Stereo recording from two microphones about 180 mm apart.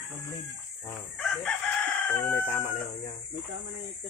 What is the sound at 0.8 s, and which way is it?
Chicken, 5° left (ahead or behind).